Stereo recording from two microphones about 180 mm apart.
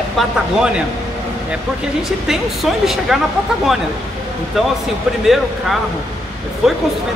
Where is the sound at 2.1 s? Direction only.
Centre (ahead or behind).